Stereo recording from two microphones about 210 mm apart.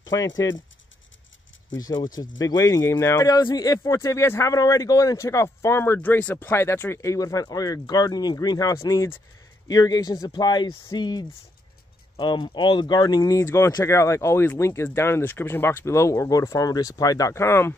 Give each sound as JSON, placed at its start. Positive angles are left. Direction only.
{"t": 0.0, "sound": "speech", "side_deg": 15}
{"t": 1.8, "sound": "speech", "side_deg": 20}